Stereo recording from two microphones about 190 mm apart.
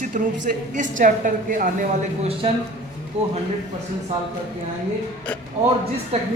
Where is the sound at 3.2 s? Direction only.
30° right (ahead or behind).